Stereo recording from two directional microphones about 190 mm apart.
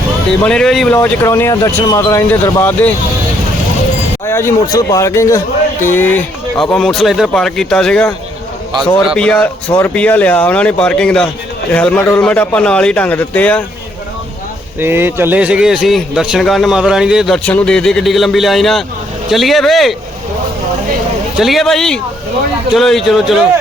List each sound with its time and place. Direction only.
0.3 s a man's voice: 5° left (ahead or behind)
0.9 s speech: 15° left (ahead or behind)
4.3 s a man's voice: 15° left (ahead or behind)
9.1 s a man's voice: 5° left (ahead or behind)
14.8 s a man's voice: 10° right (ahead or behind)
21.3 s a man's voice: centre (ahead or behind)